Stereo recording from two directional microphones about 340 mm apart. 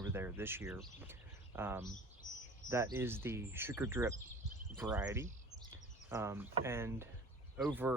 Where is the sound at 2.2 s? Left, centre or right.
Left.